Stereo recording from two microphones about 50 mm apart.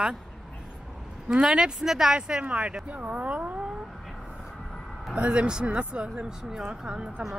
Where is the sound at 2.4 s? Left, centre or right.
Right.